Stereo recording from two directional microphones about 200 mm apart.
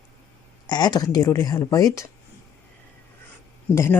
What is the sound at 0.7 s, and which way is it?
Speech, 20° left (ahead or behind).